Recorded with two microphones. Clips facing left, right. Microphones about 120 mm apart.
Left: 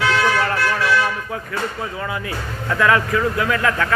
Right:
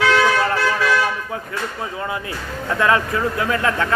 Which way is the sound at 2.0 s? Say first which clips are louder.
Even; 25° right (ahead or behind).